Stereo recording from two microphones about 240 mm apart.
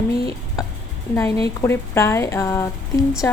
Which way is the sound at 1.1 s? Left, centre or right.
Centre.